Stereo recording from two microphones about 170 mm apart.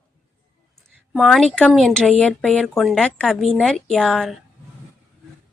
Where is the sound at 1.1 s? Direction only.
Centre (ahead or behind).